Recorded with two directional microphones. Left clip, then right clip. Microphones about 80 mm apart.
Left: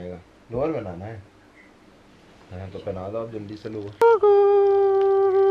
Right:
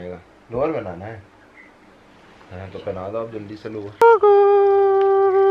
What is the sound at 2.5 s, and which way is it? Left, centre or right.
Speech, right.